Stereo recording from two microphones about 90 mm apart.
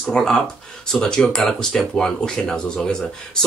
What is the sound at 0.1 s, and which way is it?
Speech, 5° left (ahead or behind).